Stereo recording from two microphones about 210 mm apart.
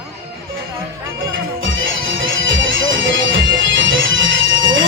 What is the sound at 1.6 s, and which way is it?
Music, 65° right (ahead or behind).